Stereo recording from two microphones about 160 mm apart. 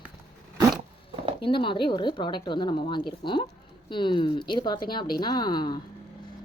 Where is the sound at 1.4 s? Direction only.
30° left (ahead or behind).